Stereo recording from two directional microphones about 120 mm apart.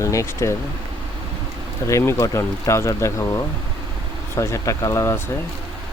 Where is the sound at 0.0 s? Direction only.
25° left (ahead or behind).